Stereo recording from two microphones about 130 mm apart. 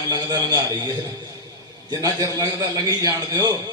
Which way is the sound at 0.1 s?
30° right (ahead or behind).